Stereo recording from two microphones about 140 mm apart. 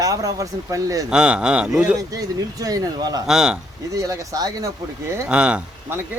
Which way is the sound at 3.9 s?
25° right (ahead or behind).